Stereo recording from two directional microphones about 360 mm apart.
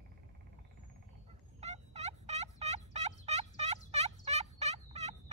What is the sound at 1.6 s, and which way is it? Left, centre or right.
Fowl, centre.